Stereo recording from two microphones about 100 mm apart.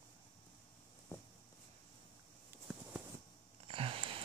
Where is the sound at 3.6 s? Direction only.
65° right (ahead or behind).